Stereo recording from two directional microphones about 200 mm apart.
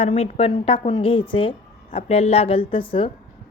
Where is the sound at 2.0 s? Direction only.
30° left (ahead or behind).